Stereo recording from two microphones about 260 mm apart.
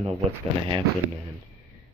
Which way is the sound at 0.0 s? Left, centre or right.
Centre.